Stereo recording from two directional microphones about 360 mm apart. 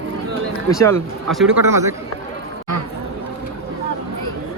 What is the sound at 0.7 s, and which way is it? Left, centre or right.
Speech, centre.